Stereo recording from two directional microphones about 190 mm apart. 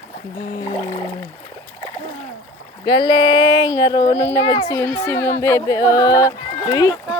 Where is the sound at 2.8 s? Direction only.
25° left (ahead or behind).